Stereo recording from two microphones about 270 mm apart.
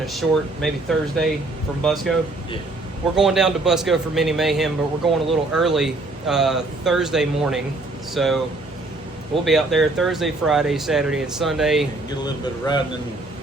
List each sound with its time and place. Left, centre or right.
0.0 s speech: centre
3.2 s speech: centre
9.4 s speech: centre
12.2 s a man's voice: centre